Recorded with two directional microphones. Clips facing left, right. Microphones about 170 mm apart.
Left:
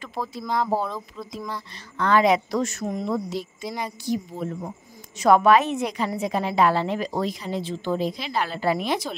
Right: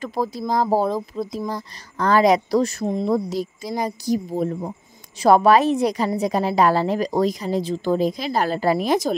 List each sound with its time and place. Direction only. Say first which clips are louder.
0.0 s speech: right 7 dB; 40° right (ahead or behind)